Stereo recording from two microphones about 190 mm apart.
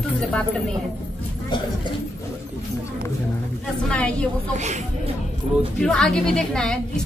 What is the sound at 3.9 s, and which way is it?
Speech, 5° left (ahead or behind).